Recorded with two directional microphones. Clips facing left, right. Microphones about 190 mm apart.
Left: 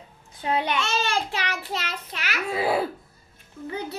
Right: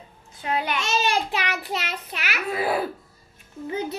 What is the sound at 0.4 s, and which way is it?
Speech, 20° left (ahead or behind).